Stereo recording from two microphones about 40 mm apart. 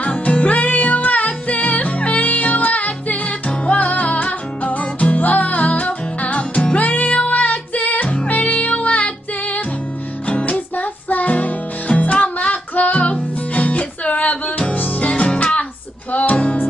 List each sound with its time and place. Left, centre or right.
0.0 s music: left
6.8 s music: left
15.0 s music: left